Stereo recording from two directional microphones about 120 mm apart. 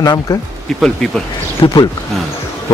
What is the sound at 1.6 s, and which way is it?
Speech, 40° left (ahead or behind).